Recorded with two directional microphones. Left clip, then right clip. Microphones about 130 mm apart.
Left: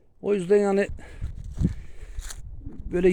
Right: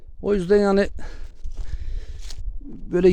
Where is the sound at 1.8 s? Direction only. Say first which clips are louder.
Right 3 dB; 45° right (ahead or behind).